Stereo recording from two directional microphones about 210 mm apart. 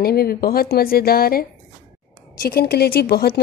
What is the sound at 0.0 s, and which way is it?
Speech, 45° left (ahead or behind).